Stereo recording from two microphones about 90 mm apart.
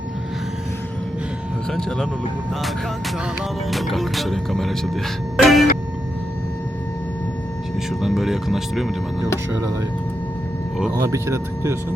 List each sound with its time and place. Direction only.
3.7 s speech: centre (ahead or behind)
5.4 s music: centre (ahead or behind)
8.0 s speech: 5° right (ahead or behind)
9.5 s speech: 35° right (ahead or behind)
11.1 s speech: 30° right (ahead or behind)